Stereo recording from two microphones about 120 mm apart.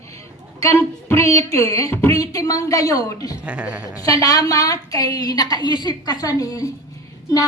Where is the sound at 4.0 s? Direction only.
30° left (ahead or behind).